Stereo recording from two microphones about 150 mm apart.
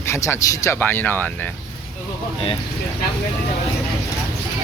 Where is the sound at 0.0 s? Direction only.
15° left (ahead or behind).